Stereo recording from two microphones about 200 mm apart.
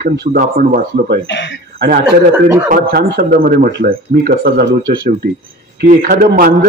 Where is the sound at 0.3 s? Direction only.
45° right (ahead or behind).